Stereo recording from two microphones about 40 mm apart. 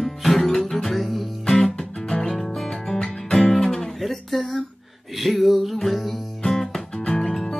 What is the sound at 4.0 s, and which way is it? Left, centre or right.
Guitar, centre.